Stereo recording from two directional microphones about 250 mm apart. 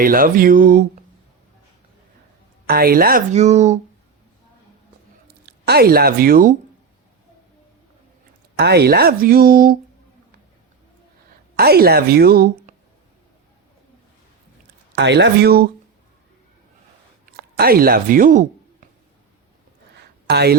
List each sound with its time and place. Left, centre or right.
0.0 s speech: right
2.6 s speech: right
5.3 s speech: right
8.5 s speech: right
11.5 s speech: right
14.9 s speech: right
17.3 s speech: right
20.0 s a sound: right